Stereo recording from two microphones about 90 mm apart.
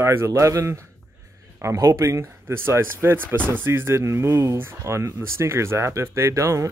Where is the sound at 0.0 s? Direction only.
30° right (ahead or behind).